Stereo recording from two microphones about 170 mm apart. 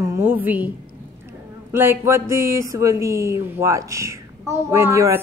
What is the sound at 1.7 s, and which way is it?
A woman's voice, 15° right (ahead or behind).